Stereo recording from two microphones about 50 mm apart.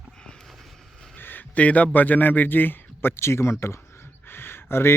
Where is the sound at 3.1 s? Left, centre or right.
Left.